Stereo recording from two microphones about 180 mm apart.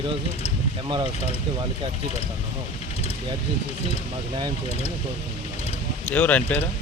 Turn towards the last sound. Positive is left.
turn(degrees=10)  # may be behind; listen again after turning